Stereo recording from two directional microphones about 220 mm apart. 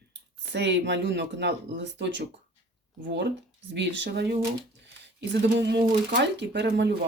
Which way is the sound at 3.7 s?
50° right (ahead or behind).